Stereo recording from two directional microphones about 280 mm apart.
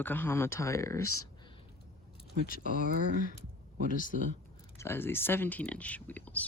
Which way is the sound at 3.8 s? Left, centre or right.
Left.